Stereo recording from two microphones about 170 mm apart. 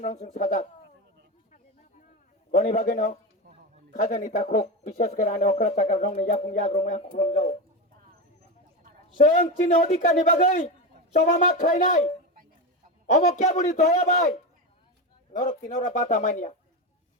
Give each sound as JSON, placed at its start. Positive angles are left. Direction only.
{"t": 0.0, "sound": "speech", "side_deg": 45}
{"t": 2.5, "sound": "speech", "side_deg": 45}
{"t": 9.2, "sound": "speech", "side_deg": 45}
{"t": 13.2, "sound": "speech", "side_deg": 45}
{"t": 15.3, "sound": "speech", "side_deg": 45}